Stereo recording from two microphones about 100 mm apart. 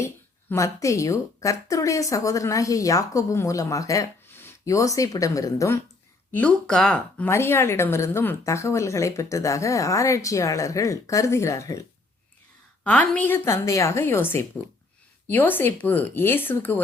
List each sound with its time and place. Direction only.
0.5 s a woman's voice: 30° left (ahead or behind)
4.3 s speech: 25° left (ahead or behind)
6.3 s speech: 10° left (ahead or behind)
7.3 s a woman's voice: 25° left (ahead or behind)
12.8 s a woman's voice: 15° left (ahead or behind)